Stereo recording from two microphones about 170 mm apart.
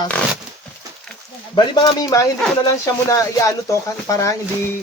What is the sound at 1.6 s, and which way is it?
Speech, 20° left (ahead or behind).